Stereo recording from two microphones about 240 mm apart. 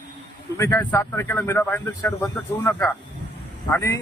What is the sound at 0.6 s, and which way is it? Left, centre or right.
A man's voice, centre.